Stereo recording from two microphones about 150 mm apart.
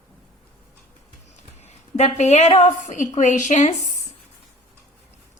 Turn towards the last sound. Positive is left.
turn(degrees=50)  # may be behind; listen again after turning